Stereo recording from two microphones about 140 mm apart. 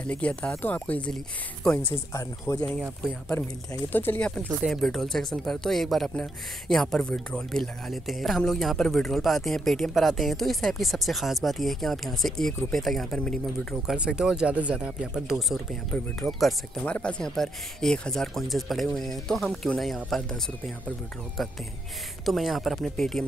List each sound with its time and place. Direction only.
0.0 s speech: 10° left (ahead or behind)
2.5 s speech: 25° left (ahead or behind)
3.9 s speech: 15° left (ahead or behind)
13.9 s speech: 5° right (ahead or behind)
22.2 s speech: centre (ahead or behind)